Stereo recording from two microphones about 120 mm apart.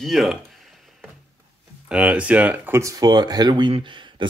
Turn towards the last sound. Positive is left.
turn(degrees=-40)  # may be behind; listen again after turning